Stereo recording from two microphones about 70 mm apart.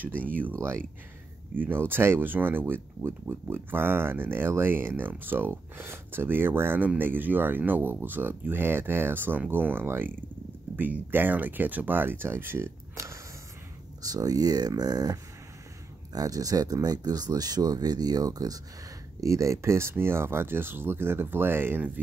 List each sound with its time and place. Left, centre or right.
1.5 s speech: right
14.0 s speech: right
19.2 s speech: right